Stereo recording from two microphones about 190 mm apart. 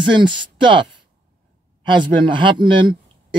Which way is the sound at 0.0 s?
25° right (ahead or behind).